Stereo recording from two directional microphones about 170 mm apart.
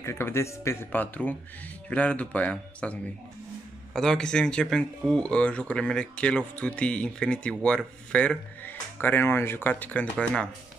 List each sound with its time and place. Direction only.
0.0 s speech: 15° left (ahead or behind)